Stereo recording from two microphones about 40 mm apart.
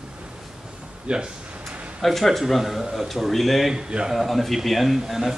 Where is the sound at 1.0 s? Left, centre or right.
Right.